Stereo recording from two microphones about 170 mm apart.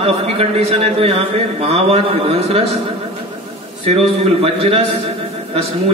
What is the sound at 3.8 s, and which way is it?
Speech, 35° right (ahead or behind).